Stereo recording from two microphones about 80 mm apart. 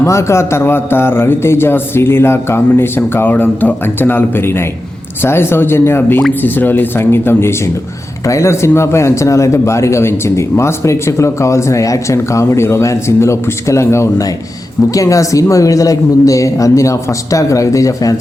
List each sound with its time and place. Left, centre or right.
0.0 s a man's voice: left